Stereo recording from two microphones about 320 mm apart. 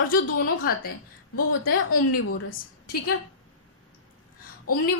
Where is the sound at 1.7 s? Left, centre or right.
Left.